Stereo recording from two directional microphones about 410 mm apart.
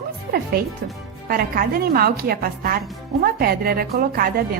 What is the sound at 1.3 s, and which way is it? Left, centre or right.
A woman's voice, right.